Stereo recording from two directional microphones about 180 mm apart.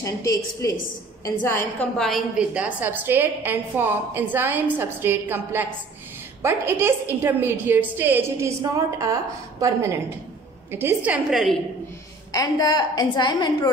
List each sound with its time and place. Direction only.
0.0 s a woman's voice: 15° left (ahead or behind)
2.0 s a woman's voice: centre (ahead or behind)
11.1 s a woman's voice: centre (ahead or behind)
12.3 s a woman's voice: 20° left (ahead or behind)